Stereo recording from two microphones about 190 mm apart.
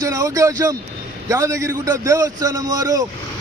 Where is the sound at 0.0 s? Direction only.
15° right (ahead or behind).